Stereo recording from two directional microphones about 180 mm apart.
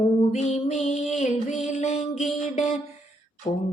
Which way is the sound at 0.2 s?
40° left (ahead or behind).